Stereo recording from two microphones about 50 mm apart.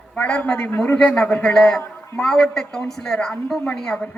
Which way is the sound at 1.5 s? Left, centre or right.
Centre.